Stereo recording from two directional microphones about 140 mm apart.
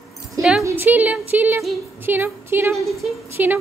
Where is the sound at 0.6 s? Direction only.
15° right (ahead or behind).